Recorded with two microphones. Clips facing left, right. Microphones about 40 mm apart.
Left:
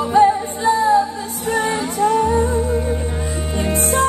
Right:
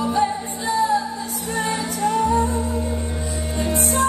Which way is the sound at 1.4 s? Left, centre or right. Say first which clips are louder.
Left 5 dB; left.